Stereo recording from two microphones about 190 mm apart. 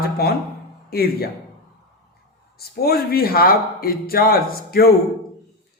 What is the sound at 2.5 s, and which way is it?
Speech, 55° left (ahead or behind).